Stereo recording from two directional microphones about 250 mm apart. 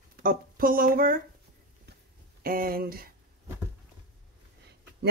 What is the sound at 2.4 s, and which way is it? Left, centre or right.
Speech, right.